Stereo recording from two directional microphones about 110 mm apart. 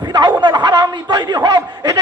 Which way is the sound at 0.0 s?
40° right (ahead or behind).